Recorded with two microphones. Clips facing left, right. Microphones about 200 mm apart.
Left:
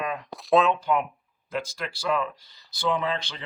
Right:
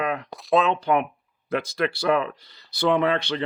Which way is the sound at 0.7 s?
65° right (ahead or behind).